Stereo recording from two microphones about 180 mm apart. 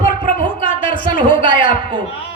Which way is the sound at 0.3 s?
30° right (ahead or behind).